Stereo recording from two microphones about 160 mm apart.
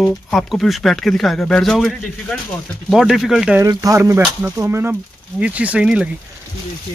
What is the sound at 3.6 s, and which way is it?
Speech, 20° right (ahead or behind).